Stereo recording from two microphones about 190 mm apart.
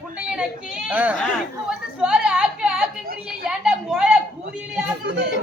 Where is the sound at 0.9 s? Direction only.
10° right (ahead or behind).